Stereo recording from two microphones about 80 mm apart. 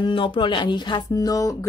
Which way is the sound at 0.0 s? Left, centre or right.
Left.